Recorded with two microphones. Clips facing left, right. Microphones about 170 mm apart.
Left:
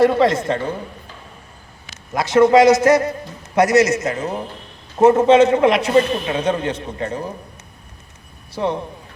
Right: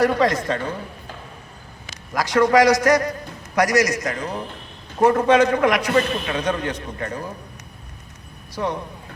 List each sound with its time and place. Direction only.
0.0 s a man's voice: 25° left (ahead or behind)
2.1 s a man's voice: 25° left (ahead or behind)
8.5 s a man's voice: 25° left (ahead or behind)